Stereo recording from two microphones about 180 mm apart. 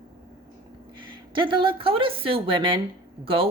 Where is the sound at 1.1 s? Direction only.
25° right (ahead or behind).